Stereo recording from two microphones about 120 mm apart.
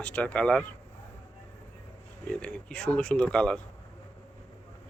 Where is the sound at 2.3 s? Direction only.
10° left (ahead or behind).